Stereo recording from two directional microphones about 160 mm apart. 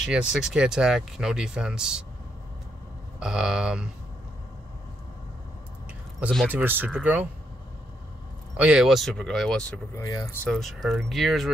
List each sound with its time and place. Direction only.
0.0 s speech: 5° right (ahead or behind)
3.2 s speech: 5° right (ahead or behind)
6.4 s speech: 10° right (ahead or behind)
8.5 s speech: 5° right (ahead or behind)
9.9 s speech: 20° left (ahead or behind)
10.4 s speech: 5° left (ahead or behind)